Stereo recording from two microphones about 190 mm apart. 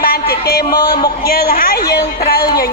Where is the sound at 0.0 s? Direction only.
55° left (ahead or behind).